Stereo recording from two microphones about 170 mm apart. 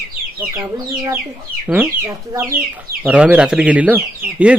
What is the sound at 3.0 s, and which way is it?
Speech, 5° right (ahead or behind).